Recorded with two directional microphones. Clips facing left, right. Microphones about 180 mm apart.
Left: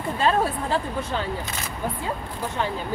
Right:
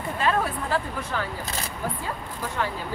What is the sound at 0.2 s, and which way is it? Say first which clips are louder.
Speech: left 3 dB; 30° left (ahead or behind).